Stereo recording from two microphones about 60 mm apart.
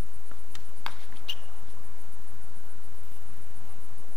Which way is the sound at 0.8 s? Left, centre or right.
Centre.